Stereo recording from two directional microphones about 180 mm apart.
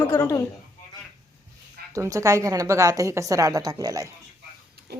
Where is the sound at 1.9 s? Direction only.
20° right (ahead or behind).